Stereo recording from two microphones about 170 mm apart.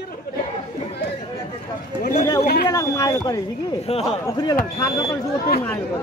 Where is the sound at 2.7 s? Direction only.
20° left (ahead or behind).